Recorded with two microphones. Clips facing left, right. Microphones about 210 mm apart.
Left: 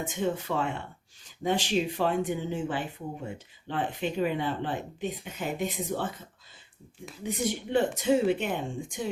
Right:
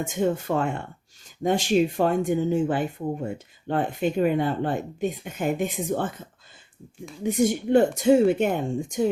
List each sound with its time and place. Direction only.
0.0 s speech: 45° right (ahead or behind)
7.3 s speech: 45° right (ahead or behind)